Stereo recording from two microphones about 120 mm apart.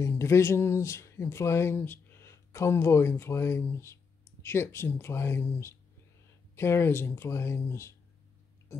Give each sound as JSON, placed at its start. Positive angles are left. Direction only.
{"t": 0.0, "sound": "speech", "side_deg": 25}